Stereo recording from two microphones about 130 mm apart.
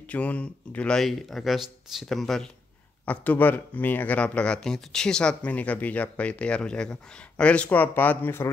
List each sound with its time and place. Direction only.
0.0 s speech: 10° left (ahead or behind)
3.1 s speech: 15° left (ahead or behind)